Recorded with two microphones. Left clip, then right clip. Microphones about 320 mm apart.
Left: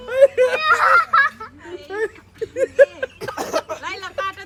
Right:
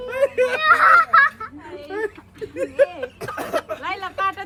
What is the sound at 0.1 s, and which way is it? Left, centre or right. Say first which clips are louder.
Screaming: left 5 dB; left.